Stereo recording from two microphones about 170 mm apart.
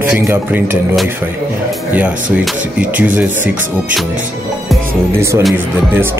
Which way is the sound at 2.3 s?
10° right (ahead or behind).